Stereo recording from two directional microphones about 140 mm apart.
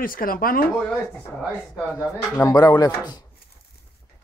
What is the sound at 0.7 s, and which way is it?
Speech, 10° left (ahead or behind).